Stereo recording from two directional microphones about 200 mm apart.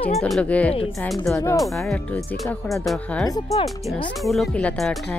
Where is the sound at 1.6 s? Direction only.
Centre (ahead or behind).